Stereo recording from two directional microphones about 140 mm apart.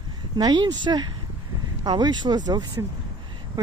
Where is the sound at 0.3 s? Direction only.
30° right (ahead or behind).